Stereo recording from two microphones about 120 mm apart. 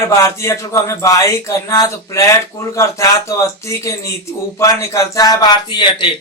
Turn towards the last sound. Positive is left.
turn(degrees=40)  # may be behind; listen again after turning